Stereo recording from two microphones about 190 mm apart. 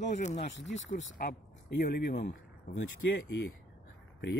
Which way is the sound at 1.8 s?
55° left (ahead or behind).